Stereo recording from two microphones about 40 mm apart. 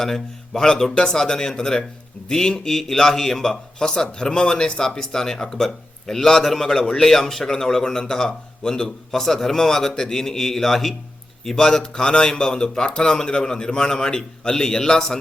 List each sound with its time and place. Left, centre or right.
0.0 s a man's voice: centre